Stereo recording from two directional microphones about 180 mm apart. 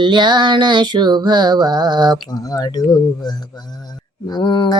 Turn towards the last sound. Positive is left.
turn(degrees=25)  # may be behind; listen again after turning